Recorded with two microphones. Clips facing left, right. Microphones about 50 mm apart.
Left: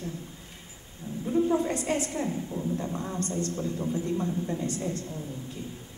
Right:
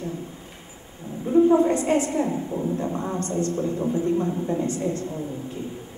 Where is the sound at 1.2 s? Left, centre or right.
Right.